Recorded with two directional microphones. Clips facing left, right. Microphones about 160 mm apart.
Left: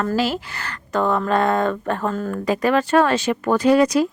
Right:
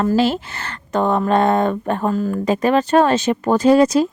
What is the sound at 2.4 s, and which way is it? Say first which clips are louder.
Speech: right 1 dB; 20° right (ahead or behind).